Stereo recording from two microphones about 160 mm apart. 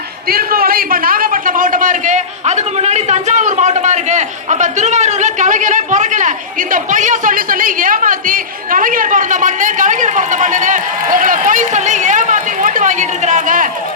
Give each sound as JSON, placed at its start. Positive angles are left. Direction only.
{"t": 0.3, "sound": "a man's voice", "side_deg": -70}